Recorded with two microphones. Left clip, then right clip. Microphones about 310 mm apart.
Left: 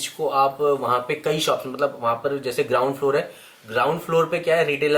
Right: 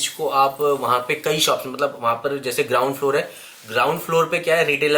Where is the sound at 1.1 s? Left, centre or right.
Centre.